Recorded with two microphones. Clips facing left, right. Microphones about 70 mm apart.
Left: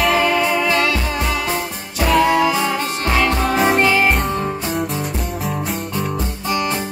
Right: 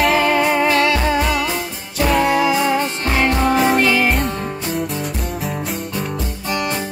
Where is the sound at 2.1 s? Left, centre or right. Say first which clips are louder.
Left 2 dB; right.